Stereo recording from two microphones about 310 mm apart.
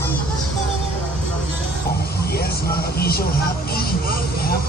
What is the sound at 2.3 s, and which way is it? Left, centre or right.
Vehicle, left.